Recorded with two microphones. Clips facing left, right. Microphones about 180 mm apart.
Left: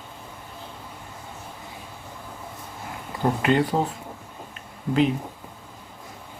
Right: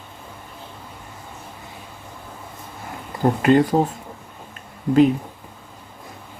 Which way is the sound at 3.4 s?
45° right (ahead or behind).